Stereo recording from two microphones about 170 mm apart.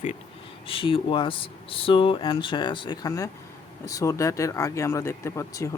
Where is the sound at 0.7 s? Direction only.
30° left (ahead or behind).